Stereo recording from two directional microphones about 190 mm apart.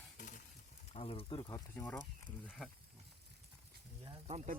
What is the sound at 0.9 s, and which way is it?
Speech, 30° left (ahead or behind).